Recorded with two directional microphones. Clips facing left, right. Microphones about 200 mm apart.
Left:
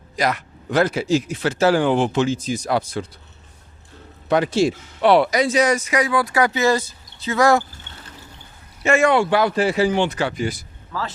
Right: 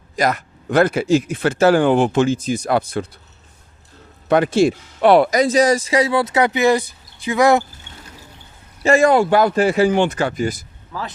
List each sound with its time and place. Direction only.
0.2 s speech: 45° right (ahead or behind)
4.3 s speech: 55° right (ahead or behind); by 7.6 s 15° right (ahead or behind)
8.8 s speech: 35° right (ahead or behind)
10.9 s speech: 15° right (ahead or behind)